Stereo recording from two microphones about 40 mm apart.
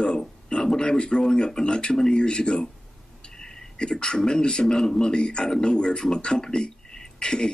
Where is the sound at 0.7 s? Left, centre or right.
Left.